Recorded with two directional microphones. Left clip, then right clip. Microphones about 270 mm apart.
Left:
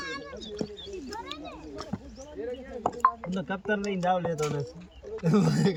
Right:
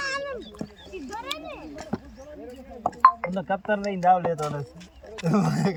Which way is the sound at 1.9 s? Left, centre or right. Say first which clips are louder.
Right 7 dB; right.